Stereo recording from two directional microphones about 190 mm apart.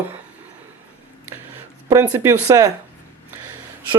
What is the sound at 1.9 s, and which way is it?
Speech, 10° right (ahead or behind).